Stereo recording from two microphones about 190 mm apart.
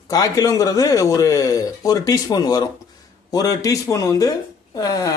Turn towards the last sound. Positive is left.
turn(degrees=20)  # may be behind; listen again after turning